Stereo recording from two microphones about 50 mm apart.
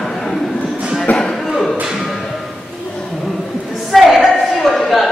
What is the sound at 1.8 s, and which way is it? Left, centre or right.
Music, centre.